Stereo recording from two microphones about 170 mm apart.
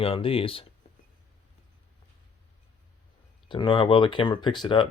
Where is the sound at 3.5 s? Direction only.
30° left (ahead or behind).